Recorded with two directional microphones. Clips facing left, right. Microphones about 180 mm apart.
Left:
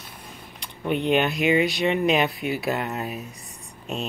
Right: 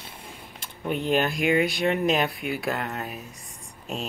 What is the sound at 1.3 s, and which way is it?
Speech, 50° right (ahead or behind).